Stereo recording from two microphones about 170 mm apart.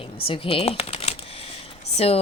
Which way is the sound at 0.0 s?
30° left (ahead or behind).